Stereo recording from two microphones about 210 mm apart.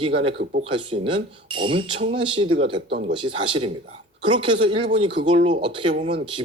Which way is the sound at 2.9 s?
50° right (ahead or behind).